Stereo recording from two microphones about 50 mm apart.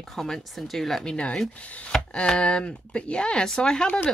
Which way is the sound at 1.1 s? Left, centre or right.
Left.